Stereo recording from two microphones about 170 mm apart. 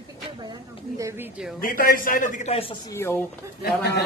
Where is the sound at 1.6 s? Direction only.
55° left (ahead or behind); by 2.7 s 40° left (ahead or behind).